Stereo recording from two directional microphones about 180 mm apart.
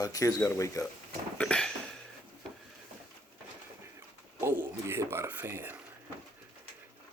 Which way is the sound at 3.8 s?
15° right (ahead or behind).